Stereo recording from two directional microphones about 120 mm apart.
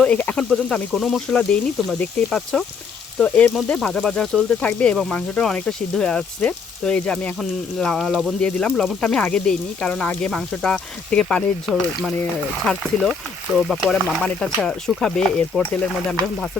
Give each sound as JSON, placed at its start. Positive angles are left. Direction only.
{"t": 0.0, "sound": "speech", "side_deg": 10}
{"t": 14.3, "sound": "speech", "side_deg": 5}